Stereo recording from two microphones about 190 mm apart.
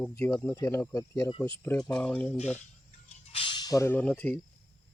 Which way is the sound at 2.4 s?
35° left (ahead or behind).